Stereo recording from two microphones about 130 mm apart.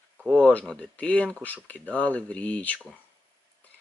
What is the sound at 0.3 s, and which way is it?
Speech, 10° left (ahead or behind).